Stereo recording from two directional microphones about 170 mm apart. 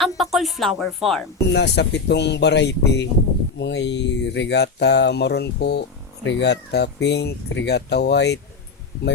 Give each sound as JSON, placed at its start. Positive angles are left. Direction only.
{"t": 0.0, "sound": "music", "side_deg": 0}
{"t": 1.5, "sound": "speech", "side_deg": 90}
{"t": 6.2, "sound": "speech", "side_deg": 90}